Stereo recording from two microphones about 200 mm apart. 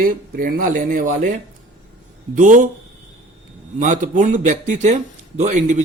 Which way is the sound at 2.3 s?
40° right (ahead or behind).